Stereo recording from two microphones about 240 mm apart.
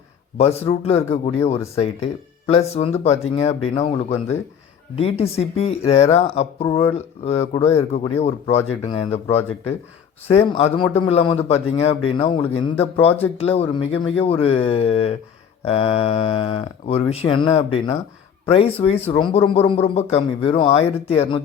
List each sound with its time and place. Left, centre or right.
0.3 s speech: left
10.2 s speech: left